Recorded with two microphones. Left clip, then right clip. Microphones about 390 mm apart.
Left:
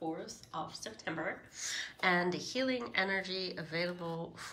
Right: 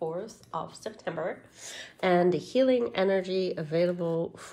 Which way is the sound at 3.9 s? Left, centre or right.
Right.